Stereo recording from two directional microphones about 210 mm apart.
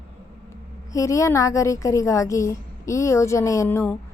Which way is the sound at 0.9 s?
15° left (ahead or behind).